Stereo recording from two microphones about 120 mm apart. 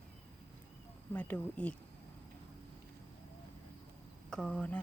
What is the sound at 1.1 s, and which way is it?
Speech, 15° left (ahead or behind).